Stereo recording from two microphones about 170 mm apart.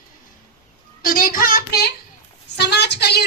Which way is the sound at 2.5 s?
85° left.